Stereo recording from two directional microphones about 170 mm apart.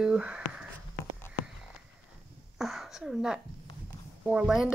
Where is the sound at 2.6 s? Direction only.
Centre (ahead or behind).